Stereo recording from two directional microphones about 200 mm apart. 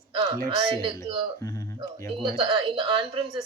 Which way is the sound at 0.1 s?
20° right (ahead or behind).